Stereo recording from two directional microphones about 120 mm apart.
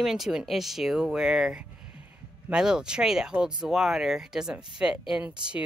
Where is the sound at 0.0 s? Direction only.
5° right (ahead or behind).